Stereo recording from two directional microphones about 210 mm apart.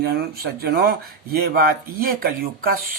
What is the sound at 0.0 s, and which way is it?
Speech, 45° right (ahead or behind).